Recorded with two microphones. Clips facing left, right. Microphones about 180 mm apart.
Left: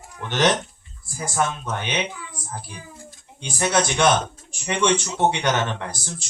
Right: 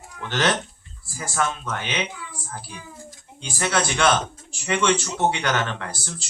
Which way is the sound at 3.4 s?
20° left (ahead or behind).